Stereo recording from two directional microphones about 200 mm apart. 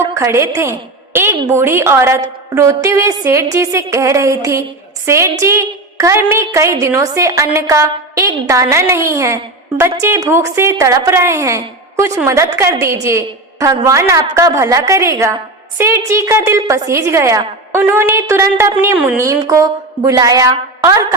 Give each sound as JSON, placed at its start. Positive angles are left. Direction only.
{"t": 0.1, "sound": "a woman's voice", "side_deg": -15}